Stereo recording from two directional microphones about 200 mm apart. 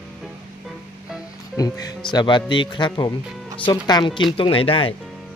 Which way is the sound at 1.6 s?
15° left (ahead or behind).